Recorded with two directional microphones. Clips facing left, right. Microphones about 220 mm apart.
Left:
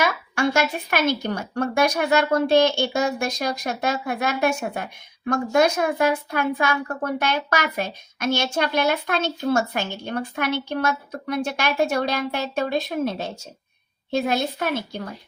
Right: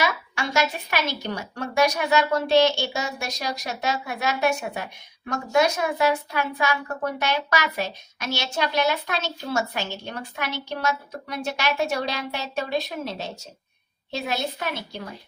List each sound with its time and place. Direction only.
0.0 s speech: 50° left (ahead or behind)